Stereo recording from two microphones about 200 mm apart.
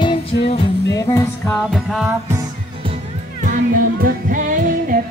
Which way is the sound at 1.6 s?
Centre (ahead or behind).